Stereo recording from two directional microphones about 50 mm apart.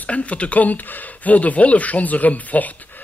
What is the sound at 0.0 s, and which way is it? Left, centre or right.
A man's voice, left.